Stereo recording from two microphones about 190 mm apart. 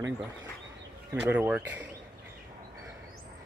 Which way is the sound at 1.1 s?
10° right (ahead or behind).